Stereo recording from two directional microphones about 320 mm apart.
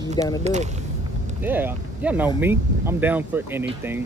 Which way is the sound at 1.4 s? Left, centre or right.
Centre.